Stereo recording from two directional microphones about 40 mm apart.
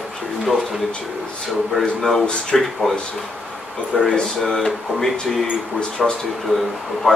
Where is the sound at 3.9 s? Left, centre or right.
Left.